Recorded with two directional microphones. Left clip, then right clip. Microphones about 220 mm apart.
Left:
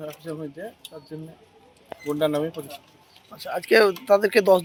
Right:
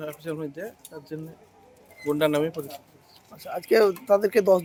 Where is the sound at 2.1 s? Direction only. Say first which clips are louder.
Right 1 dB; 25° right (ahead or behind).